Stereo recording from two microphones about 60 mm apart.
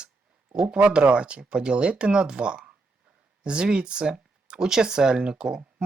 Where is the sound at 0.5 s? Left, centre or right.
Centre.